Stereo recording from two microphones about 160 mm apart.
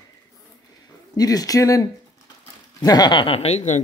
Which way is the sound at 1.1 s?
25° left (ahead or behind).